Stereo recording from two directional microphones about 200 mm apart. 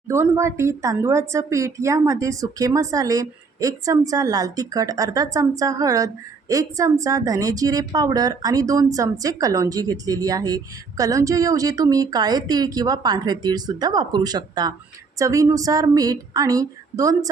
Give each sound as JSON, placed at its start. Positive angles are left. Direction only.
{"t": 0.1, "sound": "a woman's voice", "side_deg": -15}